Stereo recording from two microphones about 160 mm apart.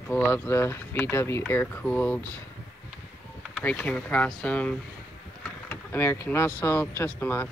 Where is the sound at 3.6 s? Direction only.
10° left (ahead or behind).